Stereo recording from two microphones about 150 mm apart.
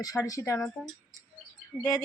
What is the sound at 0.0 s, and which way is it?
Speech, 25° left (ahead or behind).